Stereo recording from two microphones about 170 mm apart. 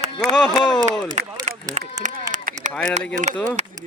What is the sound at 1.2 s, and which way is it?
Speech, 45° right (ahead or behind).